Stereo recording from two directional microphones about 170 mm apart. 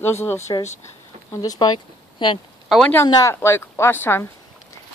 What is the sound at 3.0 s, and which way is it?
Speech, 20° left (ahead or behind).